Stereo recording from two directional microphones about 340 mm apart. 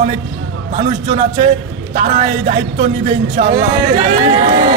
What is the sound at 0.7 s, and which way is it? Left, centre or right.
A man's voice, centre.